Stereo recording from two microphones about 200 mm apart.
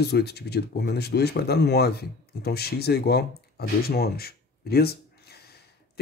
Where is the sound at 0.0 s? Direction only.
55° left (ahead or behind).